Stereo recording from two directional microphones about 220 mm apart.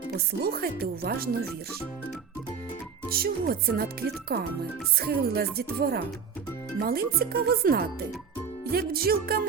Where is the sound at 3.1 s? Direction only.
45° right (ahead or behind).